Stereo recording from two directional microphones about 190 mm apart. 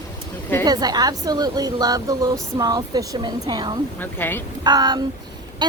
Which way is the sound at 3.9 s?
10° left (ahead or behind).